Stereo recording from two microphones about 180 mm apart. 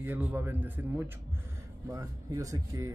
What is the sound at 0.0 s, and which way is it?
Speech, 10° right (ahead or behind).